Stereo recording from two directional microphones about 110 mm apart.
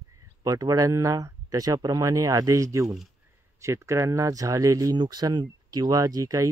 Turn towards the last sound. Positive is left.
turn(degrees=-30)  # may be behind; listen again after turning